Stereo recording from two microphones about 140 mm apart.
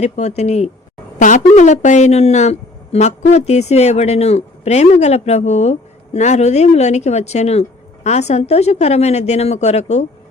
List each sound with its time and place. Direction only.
0.0 s speech: 50° left (ahead or behind)
1.2 s speech: 60° left (ahead or behind)